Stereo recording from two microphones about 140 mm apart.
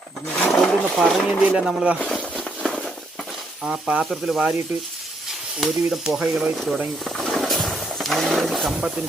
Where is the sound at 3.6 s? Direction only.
5° right (ahead or behind).